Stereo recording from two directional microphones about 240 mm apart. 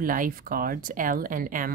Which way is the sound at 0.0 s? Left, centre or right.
Right.